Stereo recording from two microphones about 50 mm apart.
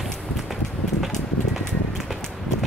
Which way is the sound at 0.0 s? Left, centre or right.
Centre.